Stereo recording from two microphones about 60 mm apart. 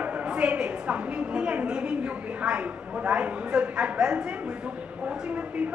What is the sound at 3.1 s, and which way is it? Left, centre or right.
A woman's voice, centre.